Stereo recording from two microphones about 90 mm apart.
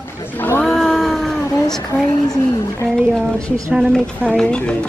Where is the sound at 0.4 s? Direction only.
20° left (ahead or behind).